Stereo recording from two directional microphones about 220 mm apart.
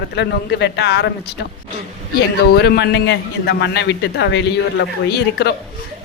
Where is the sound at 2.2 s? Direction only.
45° left (ahead or behind).